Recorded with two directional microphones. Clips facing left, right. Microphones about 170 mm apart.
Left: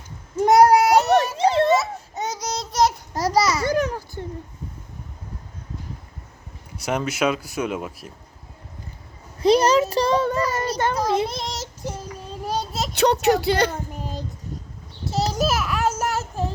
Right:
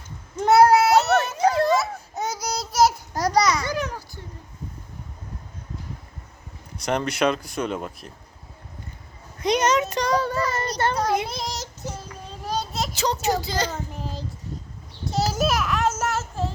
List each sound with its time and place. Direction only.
0.3 s a sound: 15° left (ahead or behind)
1.4 s children playing: 25° left (ahead or behind)
1.7 s babbling: centre (ahead or behind)
3.7 s a sound: 50° left (ahead or behind)
6.7 s speech: 5° left (ahead or behind)
9.4 s child singing: 30° left (ahead or behind)
10.5 s a sound: 10° left (ahead or behind)
11.0 s child singing: 30° left (ahead or behind)
11.3 s child singing: centre (ahead or behind)
11.9 s child singing: 10° left (ahead or behind)
12.9 s a sound: 65° left (ahead or behind)
13.2 s speech: 65° left (ahead or behind)
13.7 s child singing: 15° left (ahead or behind)
15.0 s child singing: centre (ahead or behind)